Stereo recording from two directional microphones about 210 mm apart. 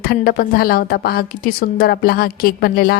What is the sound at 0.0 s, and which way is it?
A woman's voice, 45° left (ahead or behind).